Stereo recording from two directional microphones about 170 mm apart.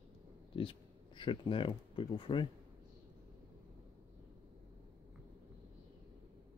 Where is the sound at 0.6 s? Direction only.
30° left (ahead or behind).